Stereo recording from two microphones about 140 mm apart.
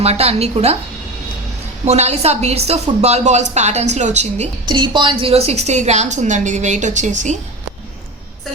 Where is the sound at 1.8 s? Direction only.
50° right (ahead or behind).